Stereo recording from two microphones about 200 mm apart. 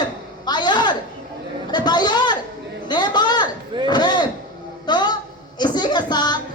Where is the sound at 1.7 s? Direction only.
20° left (ahead or behind).